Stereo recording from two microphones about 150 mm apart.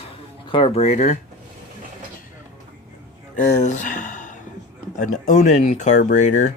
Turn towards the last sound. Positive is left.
turn(degrees=55)  # may be behind; listen again after turning